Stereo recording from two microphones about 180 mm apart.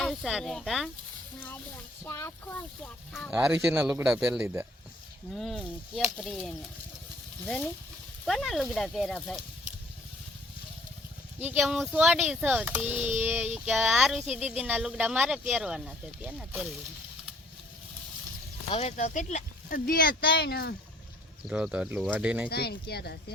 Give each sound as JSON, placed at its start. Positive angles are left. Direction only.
{"t": 0.0, "sound": "a child's voice", "side_deg": 0}
{"t": 2.0, "sound": "a child's voice", "side_deg": 15}
{"t": 3.1, "sound": "speech", "side_deg": -5}
{"t": 5.3, "sound": "a child's voice", "side_deg": 0}
{"t": 11.4, "sound": "a child's voice", "side_deg": -5}
{"t": 18.7, "sound": "speech", "side_deg": 35}
{"t": 21.4, "sound": "speech", "side_deg": -5}
{"t": 22.4, "sound": "speech", "side_deg": 60}